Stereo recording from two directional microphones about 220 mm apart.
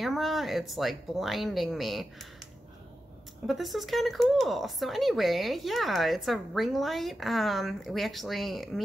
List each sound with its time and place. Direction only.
0.0 s speech: centre (ahead or behind)
3.4 s speech: centre (ahead or behind)